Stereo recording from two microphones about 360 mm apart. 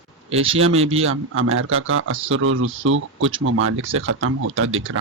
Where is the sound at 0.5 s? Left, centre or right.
Right.